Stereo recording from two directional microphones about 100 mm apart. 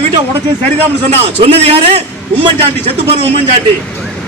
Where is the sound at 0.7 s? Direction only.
90° right.